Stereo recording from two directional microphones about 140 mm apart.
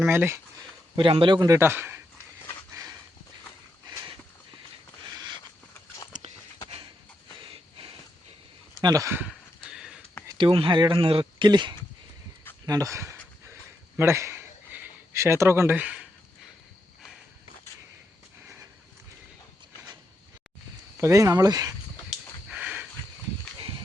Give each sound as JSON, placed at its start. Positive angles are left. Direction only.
{"t": 0.0, "sound": "speech", "side_deg": -15}
{"t": 0.9, "sound": "a man's voice", "side_deg": -35}
{"t": 5.1, "sound": "a sound", "side_deg": -30}
{"t": 7.3, "sound": "a sound", "side_deg": -40}
{"t": 8.8, "sound": "a man's voice", "side_deg": -25}
{"t": 9.7, "sound": "sniff", "side_deg": -5}
{"t": 10.3, "sound": "speech", "side_deg": -35}
{"t": 12.6, "sound": "a sound", "side_deg": -25}
{"t": 21.0, "sound": "a man's voice", "side_deg": -20}
{"t": 22.4, "sound": "sniff", "side_deg": -10}